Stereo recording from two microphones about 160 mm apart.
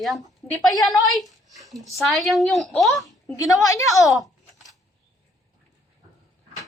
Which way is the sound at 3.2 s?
20° left (ahead or behind).